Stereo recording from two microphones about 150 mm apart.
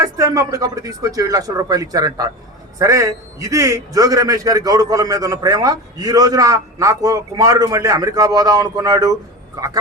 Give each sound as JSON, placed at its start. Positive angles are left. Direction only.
{"t": 0.0, "sound": "a man's voice", "side_deg": -20}